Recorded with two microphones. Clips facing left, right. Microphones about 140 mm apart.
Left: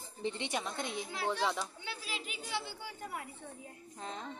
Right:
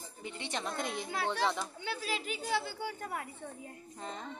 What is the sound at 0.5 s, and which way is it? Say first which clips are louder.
Speech: right 1 dB; 5° left (ahead or behind).